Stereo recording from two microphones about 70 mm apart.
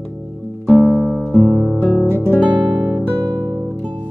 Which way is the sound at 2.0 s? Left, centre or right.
Left.